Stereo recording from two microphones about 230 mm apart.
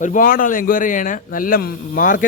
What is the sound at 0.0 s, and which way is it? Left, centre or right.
A man's voice, left.